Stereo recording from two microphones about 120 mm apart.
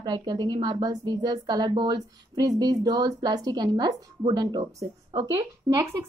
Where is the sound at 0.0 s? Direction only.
35° right (ahead or behind).